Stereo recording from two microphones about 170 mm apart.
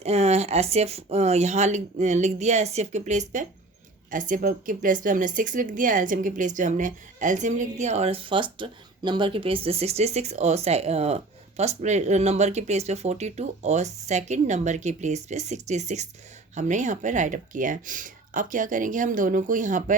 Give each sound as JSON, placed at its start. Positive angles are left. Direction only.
{"t": 0.0, "sound": "speech", "side_deg": -40}